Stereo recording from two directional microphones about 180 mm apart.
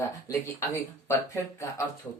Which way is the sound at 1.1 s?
15° left (ahead or behind).